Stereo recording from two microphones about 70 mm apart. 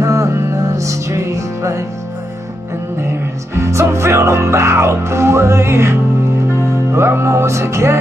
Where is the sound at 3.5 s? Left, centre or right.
Right.